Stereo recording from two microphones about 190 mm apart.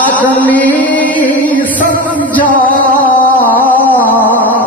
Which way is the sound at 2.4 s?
45° left (ahead or behind).